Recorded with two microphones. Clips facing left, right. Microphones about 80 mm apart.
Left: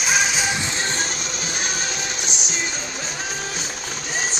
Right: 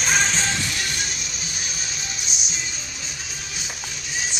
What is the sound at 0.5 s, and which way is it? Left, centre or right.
Music, left.